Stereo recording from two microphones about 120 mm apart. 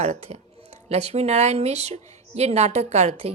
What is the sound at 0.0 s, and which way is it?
Speech, 65° right (ahead or behind).